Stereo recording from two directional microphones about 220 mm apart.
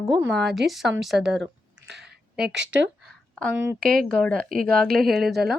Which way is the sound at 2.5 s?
55° right (ahead or behind).